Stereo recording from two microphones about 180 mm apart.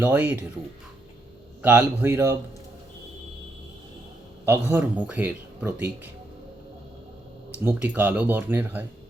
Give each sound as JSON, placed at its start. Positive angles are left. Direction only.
{"t": 0.0, "sound": "speech", "side_deg": -10}
{"t": 1.6, "sound": "speech", "side_deg": -10}
{"t": 4.4, "sound": "speech", "side_deg": -10}
{"t": 7.6, "sound": "speech", "side_deg": -10}